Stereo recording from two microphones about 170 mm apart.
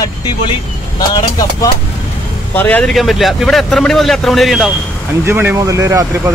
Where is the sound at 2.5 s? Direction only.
10° left (ahead or behind).